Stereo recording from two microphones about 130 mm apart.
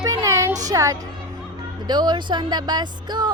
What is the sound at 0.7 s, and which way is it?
A woman's voice, 25° right (ahead or behind).